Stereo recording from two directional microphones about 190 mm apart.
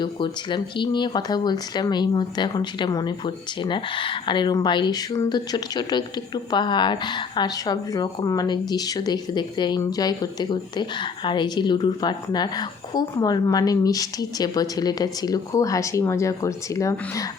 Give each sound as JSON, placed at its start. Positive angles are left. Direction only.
{"t": 0.0, "sound": "speech", "side_deg": 25}